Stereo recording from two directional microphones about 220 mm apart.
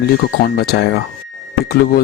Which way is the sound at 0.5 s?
45° left (ahead or behind).